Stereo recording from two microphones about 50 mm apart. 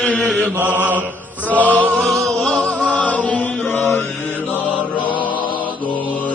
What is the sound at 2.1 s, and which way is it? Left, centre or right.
Music, centre.